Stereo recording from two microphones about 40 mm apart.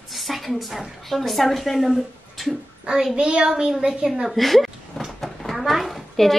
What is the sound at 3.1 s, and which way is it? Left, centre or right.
Speech, right.